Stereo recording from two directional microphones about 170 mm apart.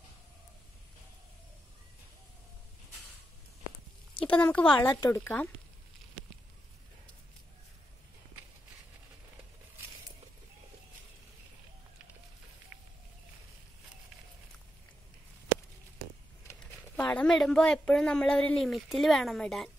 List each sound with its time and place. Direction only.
4.2 s speech: 10° left (ahead or behind)
4.8 s speech: 25° left (ahead or behind)
5.2 s speech: 10° left (ahead or behind)
16.4 s speech: 10° left (ahead or behind)